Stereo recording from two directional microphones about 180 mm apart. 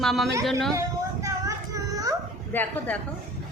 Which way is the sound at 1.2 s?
20° right (ahead or behind).